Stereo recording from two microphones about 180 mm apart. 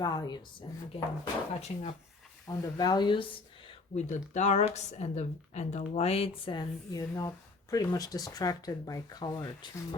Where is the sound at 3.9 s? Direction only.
40° left (ahead or behind).